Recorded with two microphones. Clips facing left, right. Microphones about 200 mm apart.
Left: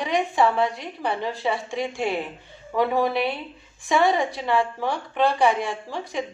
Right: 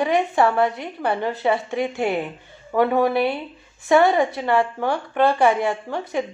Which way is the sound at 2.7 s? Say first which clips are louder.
Right 4 dB; 55° right (ahead or behind).